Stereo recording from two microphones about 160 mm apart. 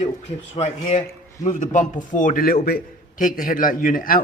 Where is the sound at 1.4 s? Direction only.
50° left (ahead or behind).